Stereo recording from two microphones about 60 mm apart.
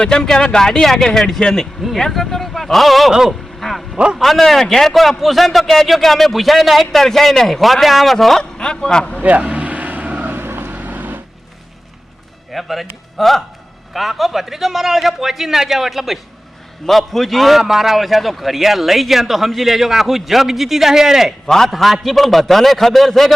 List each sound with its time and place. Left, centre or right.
0.0 s a man's voice: centre
3.6 s a sound: centre
3.9 s a man's voice: centre
4.2 s a man's voice: centre
9.2 s vehicle: right
10.3 s vehicle: right
12.5 s a man's voice: centre
21.4 s a man's voice: centre